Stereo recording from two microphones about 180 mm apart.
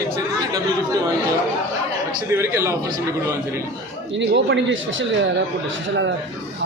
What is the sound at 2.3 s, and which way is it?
Speech, 15° right (ahead or behind).